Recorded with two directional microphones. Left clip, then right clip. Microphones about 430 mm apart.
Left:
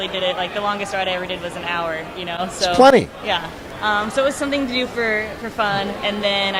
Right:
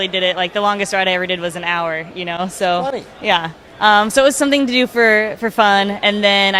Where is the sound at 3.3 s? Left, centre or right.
Right.